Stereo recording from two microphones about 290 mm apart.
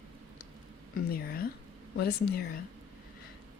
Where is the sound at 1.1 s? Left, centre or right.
Left.